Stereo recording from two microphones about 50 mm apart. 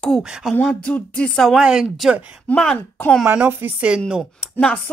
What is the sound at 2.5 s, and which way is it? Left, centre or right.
Speech, left.